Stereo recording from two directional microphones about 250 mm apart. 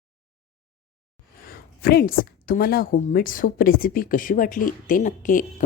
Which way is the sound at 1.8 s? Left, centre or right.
Left.